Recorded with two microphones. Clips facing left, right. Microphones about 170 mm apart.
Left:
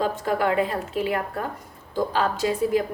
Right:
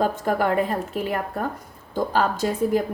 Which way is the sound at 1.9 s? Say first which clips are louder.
Right 1 dB; 50° right (ahead or behind).